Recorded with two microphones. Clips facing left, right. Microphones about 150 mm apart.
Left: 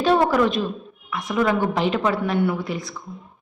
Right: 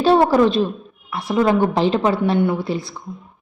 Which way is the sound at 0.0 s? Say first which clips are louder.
Right 4 dB; 30° right (ahead or behind).